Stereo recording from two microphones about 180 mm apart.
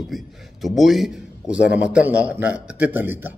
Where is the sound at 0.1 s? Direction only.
Centre (ahead or behind).